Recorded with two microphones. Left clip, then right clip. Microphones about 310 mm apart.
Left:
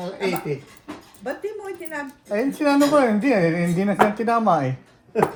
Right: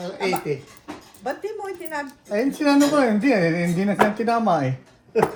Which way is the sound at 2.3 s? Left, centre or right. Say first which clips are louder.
Even; left.